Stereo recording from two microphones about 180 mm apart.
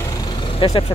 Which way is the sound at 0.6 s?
30° left (ahead or behind).